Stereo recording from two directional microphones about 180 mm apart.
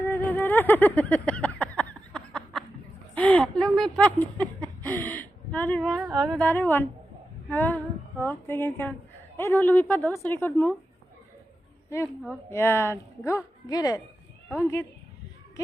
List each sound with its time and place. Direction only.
0.0 s music: 10° left (ahead or behind)
3.2 s a woman's voice: 5° left (ahead or behind)
12.0 s a woman's voice: 5° right (ahead or behind)
12.5 s a woman's voice: 15° left (ahead or behind)